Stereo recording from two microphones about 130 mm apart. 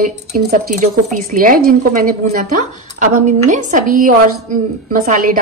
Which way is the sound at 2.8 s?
65° right (ahead or behind).